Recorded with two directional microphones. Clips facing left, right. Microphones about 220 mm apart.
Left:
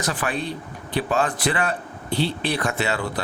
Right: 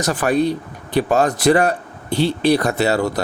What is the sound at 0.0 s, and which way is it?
Speech, 45° right (ahead or behind).